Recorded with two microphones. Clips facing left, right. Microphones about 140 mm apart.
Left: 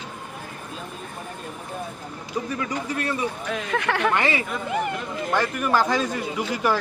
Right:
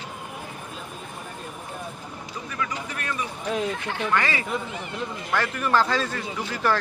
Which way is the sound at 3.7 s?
70° left (ahead or behind).